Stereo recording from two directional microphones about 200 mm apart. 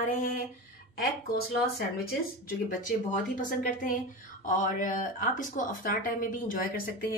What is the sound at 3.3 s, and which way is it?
Speech, 40° left (ahead or behind).